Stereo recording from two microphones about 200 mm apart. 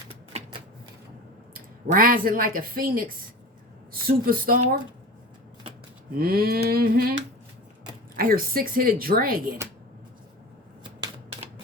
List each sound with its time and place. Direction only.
1.5 s speech: 45° right (ahead or behind)
6.1 s speech: 50° right (ahead or behind)
11.0 s typewriter: 30° right (ahead or behind)